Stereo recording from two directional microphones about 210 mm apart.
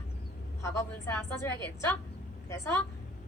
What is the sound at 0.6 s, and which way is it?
Speech, 15° left (ahead or behind).